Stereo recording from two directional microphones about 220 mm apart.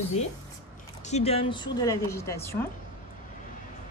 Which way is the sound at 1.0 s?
30° left (ahead or behind).